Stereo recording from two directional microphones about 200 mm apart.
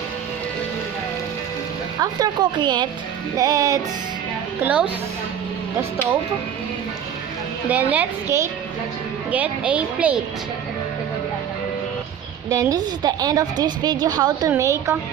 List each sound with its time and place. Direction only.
2.0 s a woman's voice: 20° right (ahead or behind)
4.6 s a woman's voice: 5° right (ahead or behind)
7.7 s a woman's voice: 10° right (ahead or behind)
12.5 s a woman's voice: 20° right (ahead or behind)